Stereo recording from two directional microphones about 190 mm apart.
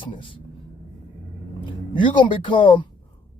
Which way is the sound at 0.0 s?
25° left (ahead or behind).